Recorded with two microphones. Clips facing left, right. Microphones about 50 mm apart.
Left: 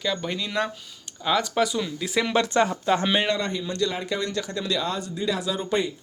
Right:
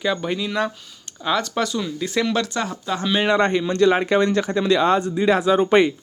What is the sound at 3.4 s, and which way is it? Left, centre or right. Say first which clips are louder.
Speech: right 9 dB; right.